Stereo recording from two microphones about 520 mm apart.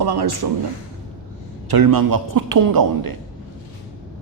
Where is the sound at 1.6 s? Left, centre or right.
Right.